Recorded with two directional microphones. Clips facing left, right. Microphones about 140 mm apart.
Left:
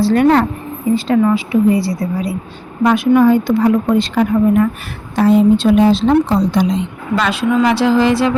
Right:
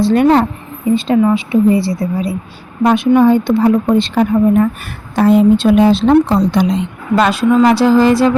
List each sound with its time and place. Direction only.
0.0 s a woman's voice: 20° right (ahead or behind)
5.1 s a woman's voice: 55° right (ahead or behind)
7.2 s a woman's voice: 40° right (ahead or behind)